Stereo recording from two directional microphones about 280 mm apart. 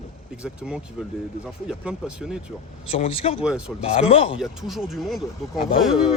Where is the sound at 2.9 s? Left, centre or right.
Left.